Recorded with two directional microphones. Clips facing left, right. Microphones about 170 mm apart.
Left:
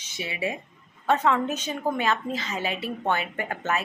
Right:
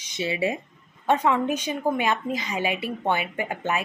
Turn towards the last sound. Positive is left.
turn(degrees=-15)  # may be behind; listen again after turning